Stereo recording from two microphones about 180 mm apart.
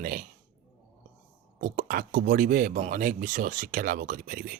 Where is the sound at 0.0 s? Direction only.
50° right (ahead or behind).